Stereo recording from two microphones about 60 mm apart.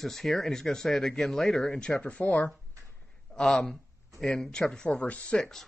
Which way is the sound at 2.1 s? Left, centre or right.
Left.